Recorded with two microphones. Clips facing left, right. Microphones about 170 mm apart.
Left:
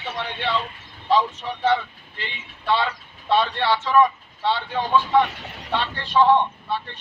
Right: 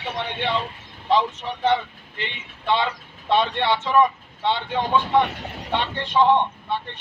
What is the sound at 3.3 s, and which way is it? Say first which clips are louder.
Speech: even; 20° right (ahead or behind).